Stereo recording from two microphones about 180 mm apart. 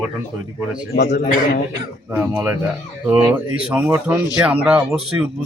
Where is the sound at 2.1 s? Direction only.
10° right (ahead or behind).